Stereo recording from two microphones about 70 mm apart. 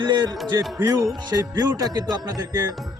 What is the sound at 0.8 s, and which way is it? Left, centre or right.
Speech, right.